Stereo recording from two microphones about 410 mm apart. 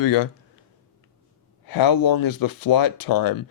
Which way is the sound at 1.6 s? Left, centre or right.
Left.